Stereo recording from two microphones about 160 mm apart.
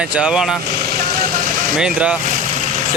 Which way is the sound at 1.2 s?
60° right (ahead or behind).